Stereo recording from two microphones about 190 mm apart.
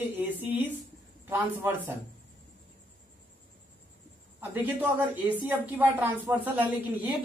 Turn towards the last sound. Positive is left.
turn(degrees=-10)  # may be behind; listen again after turning